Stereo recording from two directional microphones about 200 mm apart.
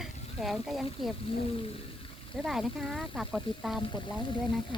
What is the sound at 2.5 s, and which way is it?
Speech, centre (ahead or behind).